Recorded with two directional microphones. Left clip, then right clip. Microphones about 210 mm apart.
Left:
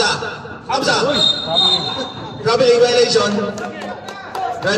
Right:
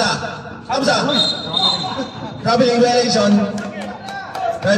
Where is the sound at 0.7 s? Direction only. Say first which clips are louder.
Even; 55° left (ahead or behind).